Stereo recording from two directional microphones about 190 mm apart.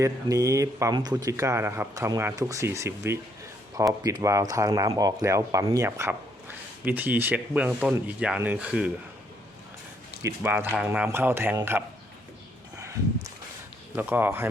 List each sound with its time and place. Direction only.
0.0 s speech: 15° right (ahead or behind)
10.2 s speech: 10° right (ahead or behind)
13.9 s speech: 10° right (ahead or behind)